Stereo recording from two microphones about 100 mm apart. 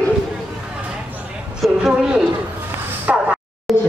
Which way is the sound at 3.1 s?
10° right (ahead or behind).